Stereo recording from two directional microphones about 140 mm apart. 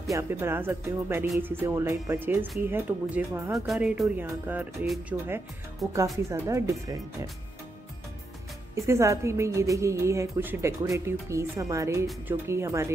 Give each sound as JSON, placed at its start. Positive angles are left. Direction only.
{"t": 0.1, "sound": "speech", "side_deg": -20}
{"t": 3.5, "sound": "speech", "side_deg": 0}
{"t": 5.8, "sound": "speech", "side_deg": 0}
{"t": 6.1, "sound": "a woman's voice", "side_deg": -20}
{"t": 8.7, "sound": "a woman's voice", "side_deg": -20}